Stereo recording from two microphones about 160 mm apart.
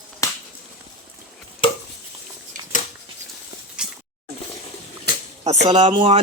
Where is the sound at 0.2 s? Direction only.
20° left (ahead or behind).